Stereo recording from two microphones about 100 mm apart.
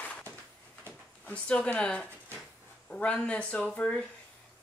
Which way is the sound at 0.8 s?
15° left (ahead or behind).